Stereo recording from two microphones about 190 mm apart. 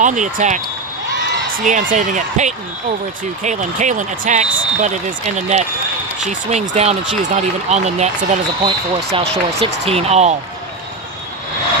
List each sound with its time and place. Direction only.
0.0 s speech: 40° right (ahead or behind)
1.1 s a sound: 45° right (ahead or behind)
1.9 s speech: 40° right (ahead or behind)